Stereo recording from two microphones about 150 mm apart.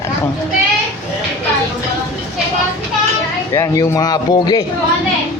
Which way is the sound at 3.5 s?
20° left (ahead or behind).